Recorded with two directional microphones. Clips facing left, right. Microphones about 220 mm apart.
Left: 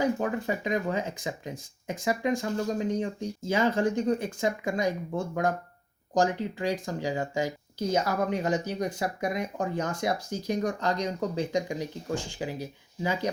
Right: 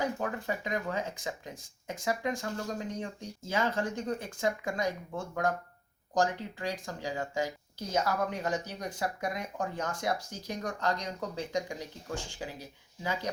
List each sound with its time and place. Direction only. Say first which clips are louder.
0.0 s speech: left 6 dB; 20° left (ahead or behind)